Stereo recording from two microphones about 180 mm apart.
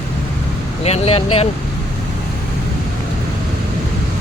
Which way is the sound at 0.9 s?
35° left (ahead or behind).